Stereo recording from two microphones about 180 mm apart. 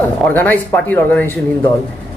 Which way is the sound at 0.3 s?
10° left (ahead or behind).